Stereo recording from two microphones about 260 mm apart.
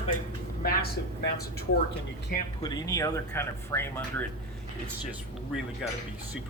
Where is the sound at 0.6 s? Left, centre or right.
Left.